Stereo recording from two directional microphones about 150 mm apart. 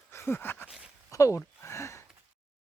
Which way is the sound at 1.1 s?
20° left (ahead or behind).